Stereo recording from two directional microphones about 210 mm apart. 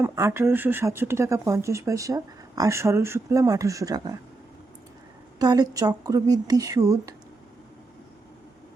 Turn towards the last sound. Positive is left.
turn(degrees=-15)  # may be behind; listen again after turning